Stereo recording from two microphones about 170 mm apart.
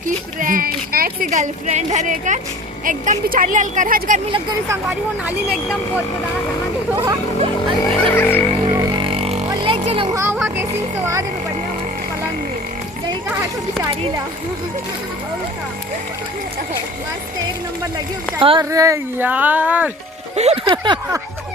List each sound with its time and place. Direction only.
0.3 s speech: 55° right (ahead or behind)
4.9 s speech: 10° right (ahead or behind)
8.1 s a sound: 10° left (ahead or behind)
8.7 s a sound: 25° right (ahead or behind)
10.2 s speech: 10° right (ahead or behind)
17.9 s speech: 30° right (ahead or behind); by 19.9 s 10° right (ahead or behind)
20.3 s speech: 40° right (ahead or behind)
20.7 s speech: 25° right (ahead or behind)